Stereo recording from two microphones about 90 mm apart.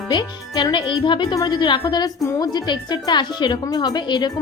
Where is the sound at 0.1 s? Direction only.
50° left (ahead or behind).